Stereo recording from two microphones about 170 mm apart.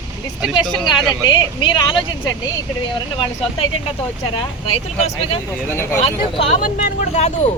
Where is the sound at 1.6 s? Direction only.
25° left (ahead or behind).